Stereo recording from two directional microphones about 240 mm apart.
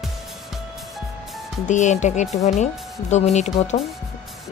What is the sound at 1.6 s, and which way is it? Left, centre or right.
Speech, left.